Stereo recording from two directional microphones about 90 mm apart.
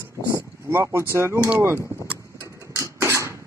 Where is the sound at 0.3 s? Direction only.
30° right (ahead or behind).